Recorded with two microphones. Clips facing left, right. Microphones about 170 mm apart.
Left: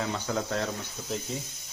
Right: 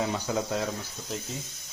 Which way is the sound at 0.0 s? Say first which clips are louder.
Right 2 dB; 15° right (ahead or behind).